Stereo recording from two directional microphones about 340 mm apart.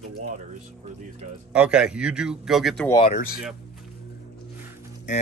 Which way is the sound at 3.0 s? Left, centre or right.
Left.